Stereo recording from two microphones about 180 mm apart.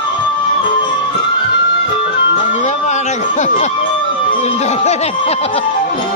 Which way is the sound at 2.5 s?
40° left (ahead or behind).